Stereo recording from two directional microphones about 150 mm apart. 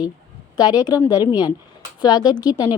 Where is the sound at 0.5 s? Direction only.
25° left (ahead or behind).